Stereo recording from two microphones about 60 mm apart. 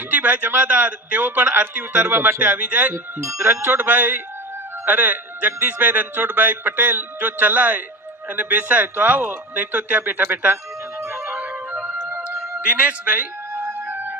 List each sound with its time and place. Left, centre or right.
0.1 s a man's voice: right
12.1 s music: right
12.5 s a man's voice: centre
13.5 s music: right